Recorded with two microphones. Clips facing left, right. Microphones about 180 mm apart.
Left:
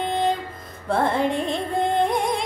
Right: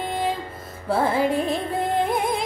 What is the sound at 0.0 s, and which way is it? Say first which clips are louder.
Music: left 3 dB; 5° right (ahead or behind).